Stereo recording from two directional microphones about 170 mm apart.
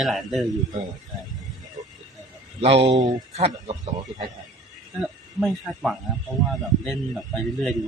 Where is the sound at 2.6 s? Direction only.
35° right (ahead or behind).